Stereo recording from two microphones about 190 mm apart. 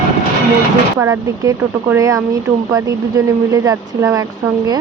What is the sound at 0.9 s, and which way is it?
Speech, 15° right (ahead or behind).